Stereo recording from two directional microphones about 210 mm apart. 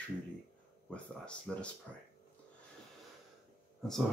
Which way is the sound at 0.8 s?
5° left (ahead or behind).